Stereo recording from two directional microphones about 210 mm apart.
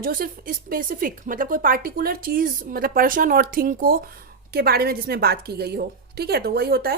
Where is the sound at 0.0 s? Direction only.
45° right (ahead or behind).